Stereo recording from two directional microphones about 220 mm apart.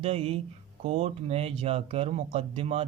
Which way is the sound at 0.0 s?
25° right (ahead or behind).